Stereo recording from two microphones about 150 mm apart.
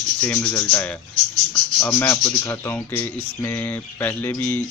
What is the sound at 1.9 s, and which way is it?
Speech, 15° left (ahead or behind).